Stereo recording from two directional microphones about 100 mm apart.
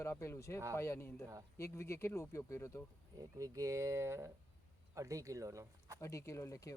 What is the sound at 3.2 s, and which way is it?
Speech, 35° right (ahead or behind).